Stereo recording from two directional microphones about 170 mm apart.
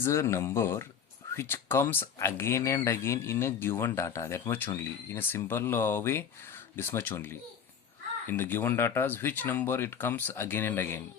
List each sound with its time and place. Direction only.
0.0 s speech: 15° left (ahead or behind)